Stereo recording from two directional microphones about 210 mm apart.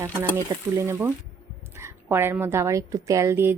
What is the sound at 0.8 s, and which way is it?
A woman's voice, 10° right (ahead or behind).